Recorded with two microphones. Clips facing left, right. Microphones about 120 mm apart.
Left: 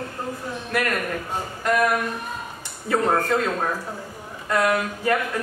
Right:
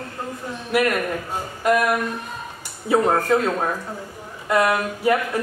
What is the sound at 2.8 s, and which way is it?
Speech, 10° right (ahead or behind).